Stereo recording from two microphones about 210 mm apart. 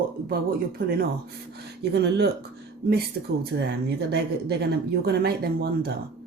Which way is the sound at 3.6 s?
50° right (ahead or behind).